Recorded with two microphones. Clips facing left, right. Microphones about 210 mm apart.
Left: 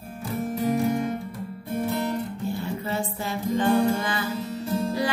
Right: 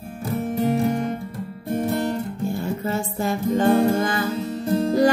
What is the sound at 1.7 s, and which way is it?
Music, 50° right (ahead or behind).